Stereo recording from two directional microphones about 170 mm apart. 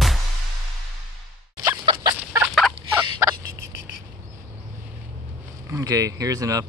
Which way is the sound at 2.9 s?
15° right (ahead or behind).